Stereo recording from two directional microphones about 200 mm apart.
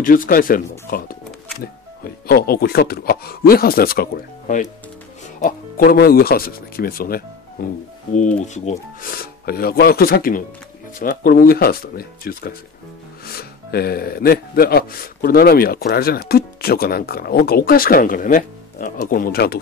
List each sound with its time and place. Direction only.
0.0 s speech: 45° left (ahead or behind)
9.0 s speech: 50° left (ahead or behind)